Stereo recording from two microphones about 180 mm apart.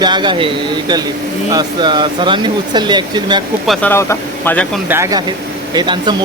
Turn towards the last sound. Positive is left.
turn(degrees=-25)  # may be behind; listen again after turning